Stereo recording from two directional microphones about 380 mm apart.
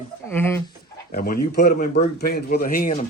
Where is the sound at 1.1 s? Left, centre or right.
Left.